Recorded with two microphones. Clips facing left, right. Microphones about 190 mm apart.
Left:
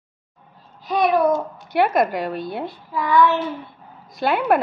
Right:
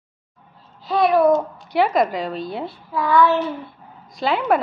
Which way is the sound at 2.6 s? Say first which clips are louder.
Right 1 dB; 20° left (ahead or behind).